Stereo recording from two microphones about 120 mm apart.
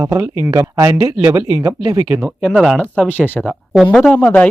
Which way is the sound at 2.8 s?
15° left (ahead or behind).